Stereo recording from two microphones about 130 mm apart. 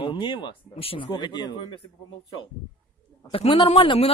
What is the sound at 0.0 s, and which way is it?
Speech, 40° left (ahead or behind).